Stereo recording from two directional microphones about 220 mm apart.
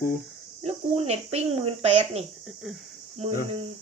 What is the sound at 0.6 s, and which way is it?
Speech, 30° right (ahead or behind).